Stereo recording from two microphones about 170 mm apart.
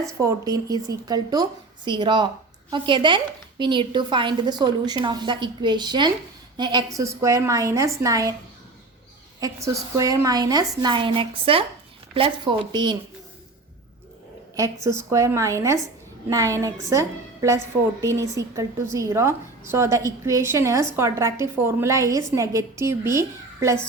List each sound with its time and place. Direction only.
0.0 s a woman's voice: 20° right (ahead or behind)
9.4 s a woman's voice: 20° right (ahead or behind)
14.5 s a woman's voice: 20° right (ahead or behind)